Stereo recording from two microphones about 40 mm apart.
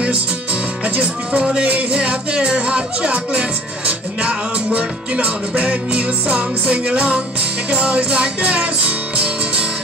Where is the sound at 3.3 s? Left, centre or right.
Right.